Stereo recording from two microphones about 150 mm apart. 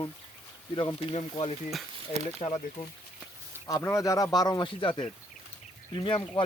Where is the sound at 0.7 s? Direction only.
35° left (ahead or behind).